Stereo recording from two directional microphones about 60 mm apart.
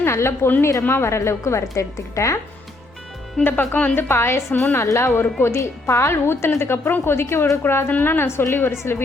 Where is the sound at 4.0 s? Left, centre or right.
Left.